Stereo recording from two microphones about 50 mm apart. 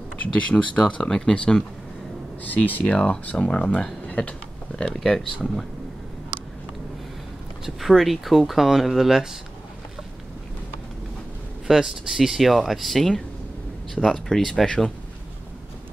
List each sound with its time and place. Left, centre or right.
0.2 s speech: left
2.4 s speech: left
3.3 s speech: centre
4.1 s a sound: left
4.9 s speech: centre
7.6 s speech: centre
11.6 s speech: centre